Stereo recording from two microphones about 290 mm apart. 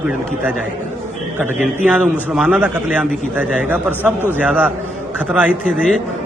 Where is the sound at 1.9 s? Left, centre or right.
Centre.